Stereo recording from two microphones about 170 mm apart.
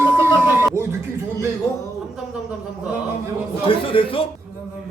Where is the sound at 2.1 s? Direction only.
5° right (ahead or behind).